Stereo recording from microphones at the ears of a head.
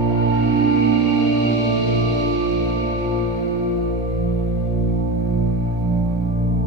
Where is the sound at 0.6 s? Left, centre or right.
Right.